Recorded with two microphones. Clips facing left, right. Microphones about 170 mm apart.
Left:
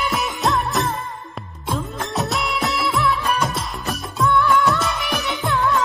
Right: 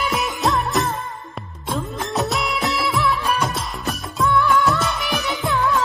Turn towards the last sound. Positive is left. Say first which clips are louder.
# even
turn(degrees=0)  # may be behind; listen again after turning